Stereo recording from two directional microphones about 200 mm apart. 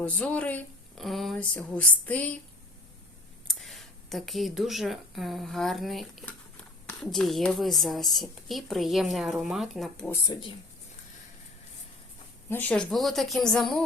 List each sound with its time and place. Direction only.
0.0 s a woman's voice: 5° left (ahead or behind)
3.4 s a woman's voice: centre (ahead or behind)
10.1 s speech: 20° left (ahead or behind)
12.5 s a woman's voice: 10° left (ahead or behind)